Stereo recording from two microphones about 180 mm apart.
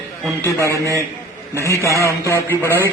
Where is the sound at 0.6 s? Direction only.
15° right (ahead or behind).